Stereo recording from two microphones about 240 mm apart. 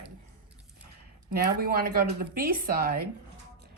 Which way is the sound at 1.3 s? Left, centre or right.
Right.